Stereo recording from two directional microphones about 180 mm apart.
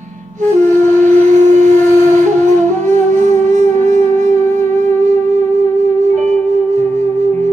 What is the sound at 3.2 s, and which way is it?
Music, 40° right (ahead or behind).